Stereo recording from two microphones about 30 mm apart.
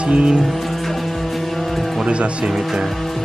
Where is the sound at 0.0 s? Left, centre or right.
Right.